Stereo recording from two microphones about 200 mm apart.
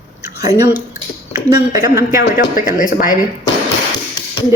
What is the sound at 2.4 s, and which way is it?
Speech, 40° left (ahead or behind).